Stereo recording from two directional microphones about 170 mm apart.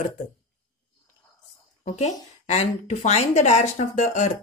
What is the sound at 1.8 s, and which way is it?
A woman's voice, 40° left (ahead or behind).